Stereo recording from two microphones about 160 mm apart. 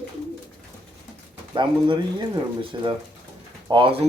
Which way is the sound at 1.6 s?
30° right (ahead or behind).